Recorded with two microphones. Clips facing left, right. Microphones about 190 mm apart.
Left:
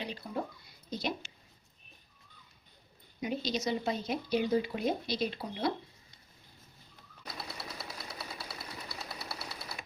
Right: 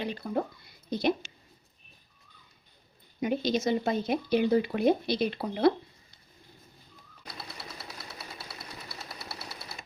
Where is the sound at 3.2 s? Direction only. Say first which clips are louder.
Right 6 dB; 55° right (ahead or behind).